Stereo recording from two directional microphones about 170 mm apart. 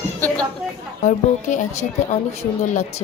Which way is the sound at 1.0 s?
45° left (ahead or behind).